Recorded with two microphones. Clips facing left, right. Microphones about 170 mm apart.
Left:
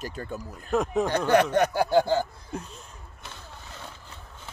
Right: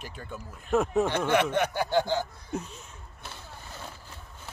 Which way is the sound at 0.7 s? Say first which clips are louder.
Even; centre (ahead or behind).